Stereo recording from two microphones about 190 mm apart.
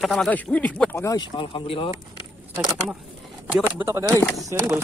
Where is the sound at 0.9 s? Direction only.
15° left (ahead or behind).